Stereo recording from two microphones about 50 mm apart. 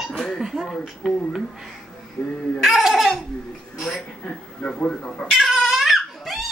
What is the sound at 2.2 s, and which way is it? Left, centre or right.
Speech, left.